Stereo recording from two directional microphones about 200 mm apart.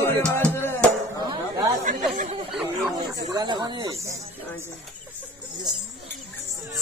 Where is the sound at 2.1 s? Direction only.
40° right (ahead or behind).